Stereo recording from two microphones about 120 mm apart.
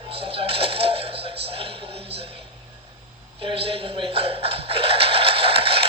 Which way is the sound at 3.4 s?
50° right (ahead or behind).